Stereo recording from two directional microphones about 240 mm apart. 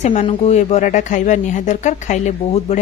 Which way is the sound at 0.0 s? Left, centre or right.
Left.